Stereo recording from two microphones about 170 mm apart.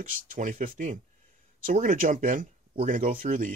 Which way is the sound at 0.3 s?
55° right (ahead or behind).